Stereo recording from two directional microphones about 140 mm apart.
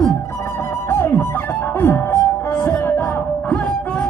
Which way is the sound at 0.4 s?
20° left (ahead or behind).